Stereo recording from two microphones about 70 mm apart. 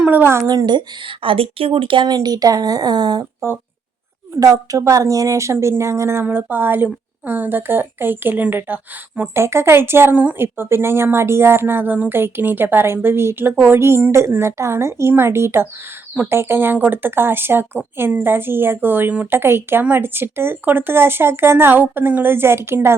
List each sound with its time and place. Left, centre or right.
0.0 s a sound: right
0.4 s speech: right
2.0 s speech: right
4.4 s a woman's voice: right
6.2 s a woman's voice: right
9.3 s a woman's voice: right